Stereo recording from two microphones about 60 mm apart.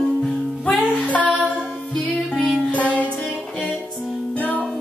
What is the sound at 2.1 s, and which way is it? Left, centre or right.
Music, centre.